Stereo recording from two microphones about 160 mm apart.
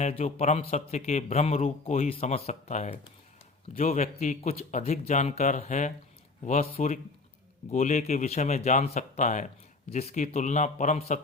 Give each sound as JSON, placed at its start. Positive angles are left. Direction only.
{"t": 0.0, "sound": "speech", "side_deg": 40}